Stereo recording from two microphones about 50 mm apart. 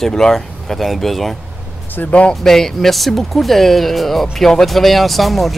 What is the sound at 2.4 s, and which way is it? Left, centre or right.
Speech, centre.